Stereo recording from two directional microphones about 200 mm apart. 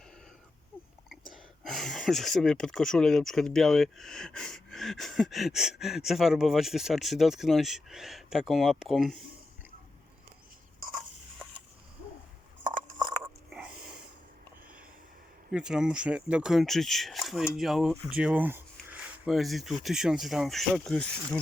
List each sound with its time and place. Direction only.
1.3 s speech: centre (ahead or behind)
13.0 s biting: 20° right (ahead or behind)
13.5 s snort: 5° right (ahead or behind)
15.5 s speech: 5° right (ahead or behind)